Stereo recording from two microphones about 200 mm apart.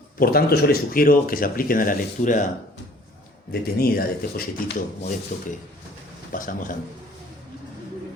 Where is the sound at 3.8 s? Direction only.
50° left (ahead or behind).